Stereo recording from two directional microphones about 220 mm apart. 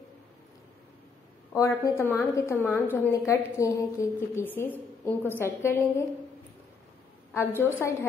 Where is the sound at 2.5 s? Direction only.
5° right (ahead or behind).